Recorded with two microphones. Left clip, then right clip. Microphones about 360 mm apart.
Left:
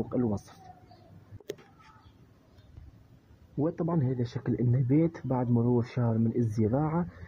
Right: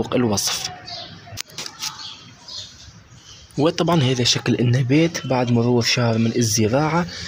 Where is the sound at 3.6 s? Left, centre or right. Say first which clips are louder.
Right 13 dB; left.